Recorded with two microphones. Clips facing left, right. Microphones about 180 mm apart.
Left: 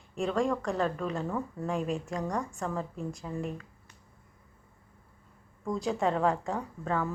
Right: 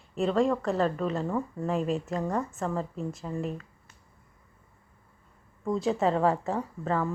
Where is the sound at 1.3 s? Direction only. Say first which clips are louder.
Right 3 dB; 15° right (ahead or behind).